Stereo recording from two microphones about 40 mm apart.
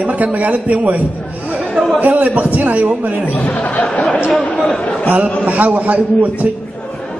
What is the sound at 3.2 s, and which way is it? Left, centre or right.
Speech, left.